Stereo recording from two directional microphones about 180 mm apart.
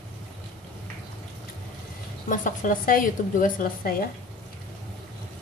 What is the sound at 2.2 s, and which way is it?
A woman's voice, 45° left (ahead or behind).